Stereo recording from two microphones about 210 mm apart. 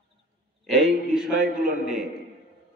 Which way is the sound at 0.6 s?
Centre (ahead or behind).